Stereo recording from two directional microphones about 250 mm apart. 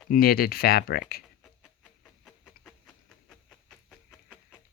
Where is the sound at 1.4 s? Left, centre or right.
Centre.